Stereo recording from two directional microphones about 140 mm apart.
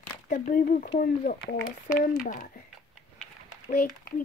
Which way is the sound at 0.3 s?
80° left.